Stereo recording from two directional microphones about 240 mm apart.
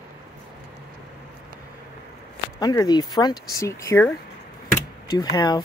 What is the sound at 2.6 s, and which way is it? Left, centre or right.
Speech, centre.